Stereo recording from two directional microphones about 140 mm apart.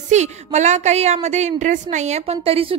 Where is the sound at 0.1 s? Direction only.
55° right (ahead or behind).